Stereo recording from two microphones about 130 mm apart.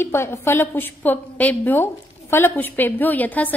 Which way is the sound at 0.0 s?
20° left (ahead or behind).